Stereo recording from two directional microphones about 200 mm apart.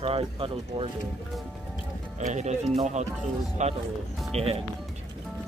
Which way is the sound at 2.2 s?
35° right (ahead or behind).